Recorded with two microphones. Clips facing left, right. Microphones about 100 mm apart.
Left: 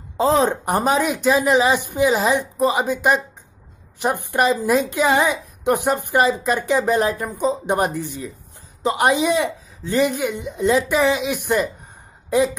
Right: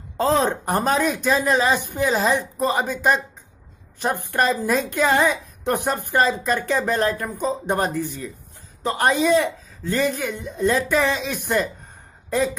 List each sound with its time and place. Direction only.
0.5 s a woman's voice: 15° left (ahead or behind)